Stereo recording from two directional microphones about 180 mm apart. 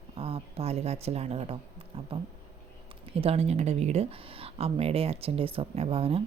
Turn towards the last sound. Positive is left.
turn(degrees=-30)  # may be behind; listen again after turning